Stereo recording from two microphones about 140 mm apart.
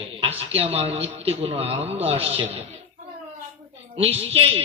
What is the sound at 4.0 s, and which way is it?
Speech, 45° right (ahead or behind).